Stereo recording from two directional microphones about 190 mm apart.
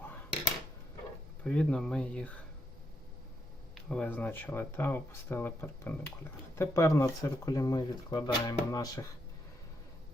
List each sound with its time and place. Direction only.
1.5 s speech: 5° left (ahead or behind)
3.8 s speech: 5° left (ahead or behind); by 9.0 s 20° left (ahead or behind)